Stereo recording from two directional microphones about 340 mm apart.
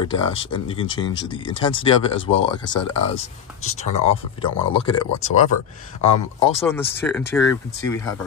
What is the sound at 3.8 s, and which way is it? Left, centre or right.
Speech, centre.